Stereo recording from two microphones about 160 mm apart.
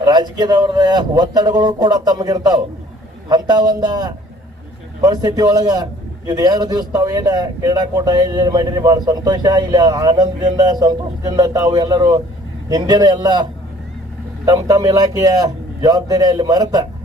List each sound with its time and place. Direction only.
0.0 s a man's voice: 25° right (ahead or behind)